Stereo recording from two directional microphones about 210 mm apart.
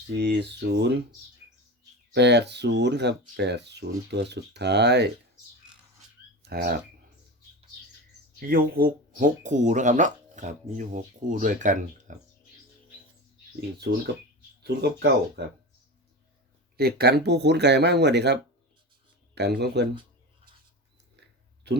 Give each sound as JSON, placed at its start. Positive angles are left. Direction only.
{"t": 0.2, "sound": "speech", "side_deg": -55}
{"t": 2.1, "sound": "speech", "side_deg": -55}
{"t": 6.4, "sound": "a sound", "side_deg": -50}
{"t": 8.4, "sound": "speech", "side_deg": -45}
{"t": 13.6, "sound": "speech", "side_deg": -50}
{"t": 16.7, "sound": "speech", "side_deg": -50}
{"t": 21.7, "sound": "speech", "side_deg": -55}